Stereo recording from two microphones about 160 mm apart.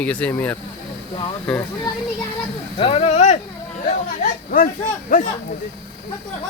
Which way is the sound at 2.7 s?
35° left (ahead or behind).